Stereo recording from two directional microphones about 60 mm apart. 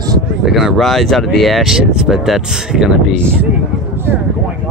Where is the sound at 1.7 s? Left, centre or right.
Centre.